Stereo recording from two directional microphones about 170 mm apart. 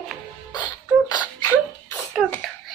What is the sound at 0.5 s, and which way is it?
Beatboxing, 25° left (ahead or behind).